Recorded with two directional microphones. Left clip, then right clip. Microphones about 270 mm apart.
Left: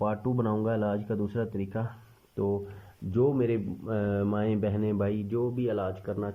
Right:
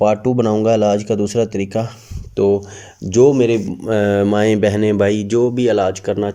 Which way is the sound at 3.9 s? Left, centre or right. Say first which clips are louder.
Right 16 dB; right.